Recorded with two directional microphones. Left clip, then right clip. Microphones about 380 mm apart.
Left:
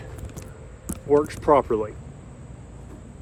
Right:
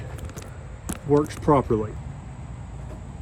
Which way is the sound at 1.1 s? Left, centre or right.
Centre.